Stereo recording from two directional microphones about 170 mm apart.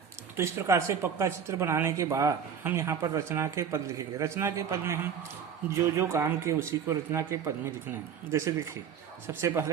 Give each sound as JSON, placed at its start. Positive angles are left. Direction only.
{"t": 0.3, "sound": "speech", "side_deg": -15}
{"t": 6.0, "sound": "speech", "side_deg": -15}